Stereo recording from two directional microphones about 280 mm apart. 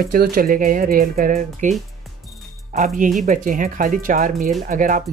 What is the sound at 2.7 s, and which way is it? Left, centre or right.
Speech, right.